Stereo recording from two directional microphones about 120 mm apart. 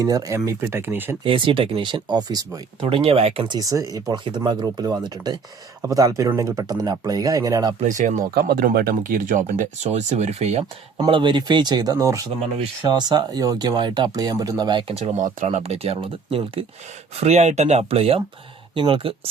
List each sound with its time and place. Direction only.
0.0 s speech: 30° right (ahead or behind)
1.2 s speech: 45° right (ahead or behind)
2.8 s speech: 50° right (ahead or behind)
3.5 s speech: 30° right (ahead or behind)
7.8 s speech: 90° right; by 10.6 s 65° right (ahead or behind)
10.9 s speech: 40° right (ahead or behind)
14.9 s speech: 75° right (ahead or behind); by 16.6 s 50° right (ahead or behind)
17.2 s speech: 65° right (ahead or behind)
18.7 s speech: 45° right (ahead or behind)